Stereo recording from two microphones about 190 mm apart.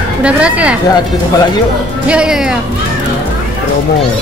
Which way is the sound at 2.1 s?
5° right (ahead or behind).